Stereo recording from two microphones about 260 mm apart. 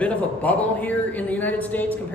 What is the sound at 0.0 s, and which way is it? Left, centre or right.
Speech, centre.